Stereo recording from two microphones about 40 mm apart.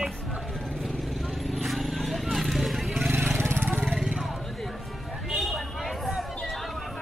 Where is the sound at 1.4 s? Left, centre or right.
Centre.